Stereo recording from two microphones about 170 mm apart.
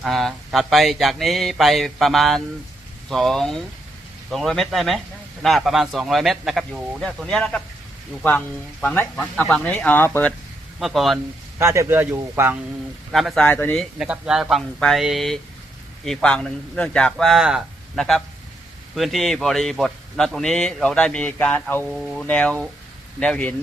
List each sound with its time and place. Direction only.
0.0 s speech: centre (ahead or behind)
10.8 s speech: centre (ahead or behind)
11.6 s a man's voice: 15° right (ahead or behind)
13.1 s speech: centre (ahead or behind)
14.0 s speech: 5° right (ahead or behind)
21.8 s speech: centre (ahead or behind)